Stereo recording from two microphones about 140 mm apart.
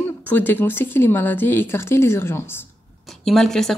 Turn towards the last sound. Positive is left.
turn(degrees=5)  # may be behind; listen again after turning